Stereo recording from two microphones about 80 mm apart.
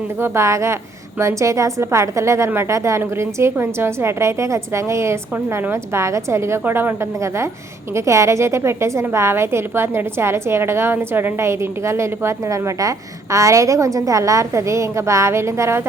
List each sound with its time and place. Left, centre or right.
0.2 s a woman's voice: right
7.9 s a woman's voice: right